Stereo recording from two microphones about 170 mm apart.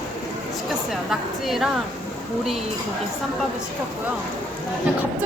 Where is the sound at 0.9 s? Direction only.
Centre (ahead or behind).